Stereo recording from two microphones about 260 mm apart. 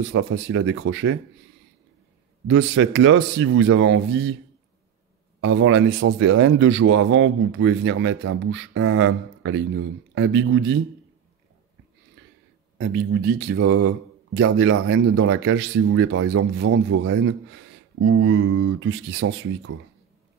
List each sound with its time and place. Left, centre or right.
0.0 s speech: right
2.4 s speech: right
5.4 s speech: right
12.2 s a sound: right
12.7 s speech: right